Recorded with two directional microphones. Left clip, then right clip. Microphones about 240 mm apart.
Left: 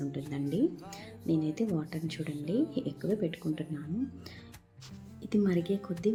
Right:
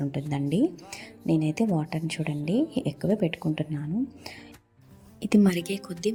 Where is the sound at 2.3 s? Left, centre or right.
Centre.